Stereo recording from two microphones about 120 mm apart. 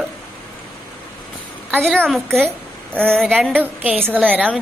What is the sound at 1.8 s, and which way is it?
A woman's voice, centre (ahead or behind).